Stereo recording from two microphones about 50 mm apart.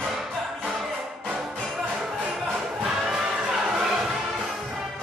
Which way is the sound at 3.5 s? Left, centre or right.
Centre.